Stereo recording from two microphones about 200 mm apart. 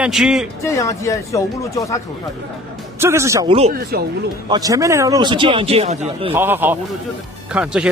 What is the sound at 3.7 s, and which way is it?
Speech, 50° right (ahead or behind).